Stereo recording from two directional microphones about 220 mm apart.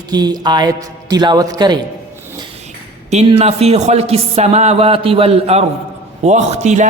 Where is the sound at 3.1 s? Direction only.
30° right (ahead or behind).